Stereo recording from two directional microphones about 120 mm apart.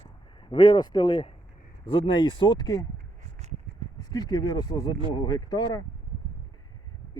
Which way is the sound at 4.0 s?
35° left (ahead or behind).